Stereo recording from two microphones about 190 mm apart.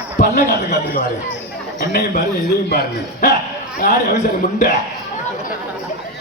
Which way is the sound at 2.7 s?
55° left (ahead or behind).